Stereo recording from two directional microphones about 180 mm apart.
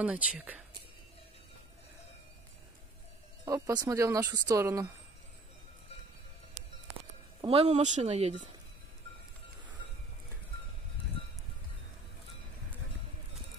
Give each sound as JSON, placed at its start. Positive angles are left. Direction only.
{"t": 0.0, "sound": "speech", "side_deg": -5}
{"t": 3.4, "sound": "speech", "side_deg": -20}
{"t": 6.6, "sound": "music", "side_deg": -40}
{"t": 7.4, "sound": "speech", "side_deg": -35}